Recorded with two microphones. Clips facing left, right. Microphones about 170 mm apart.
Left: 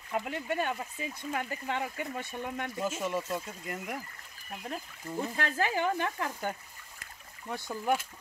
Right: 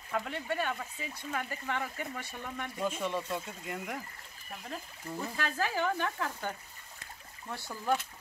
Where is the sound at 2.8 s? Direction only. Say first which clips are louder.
Even; 5° left (ahead or behind).